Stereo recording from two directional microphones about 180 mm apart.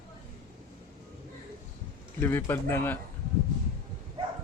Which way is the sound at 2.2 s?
15° left (ahead or behind).